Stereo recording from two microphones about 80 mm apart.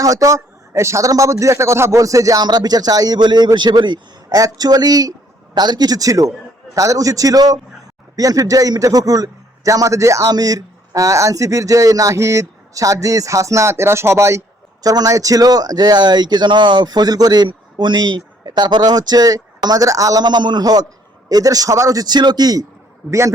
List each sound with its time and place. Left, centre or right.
0.0 s a man's voice: right
2.4 s speech: right
3.2 s speech: right
4.3 s a man's voice: right
14.8 s speech: right
20.2 s a man's voice: right
22.0 s speech: right